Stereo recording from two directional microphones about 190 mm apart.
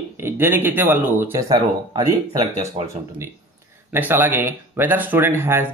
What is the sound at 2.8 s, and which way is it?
Speech, 30° right (ahead or behind).